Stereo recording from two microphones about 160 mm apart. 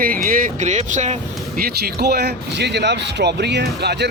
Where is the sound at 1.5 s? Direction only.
75° right (ahead or behind).